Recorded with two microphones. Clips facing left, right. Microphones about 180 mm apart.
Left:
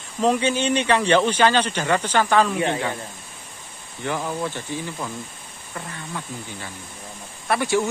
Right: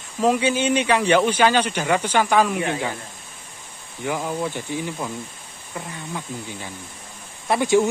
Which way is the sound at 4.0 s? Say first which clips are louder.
Right 1 dB; 10° right (ahead or behind).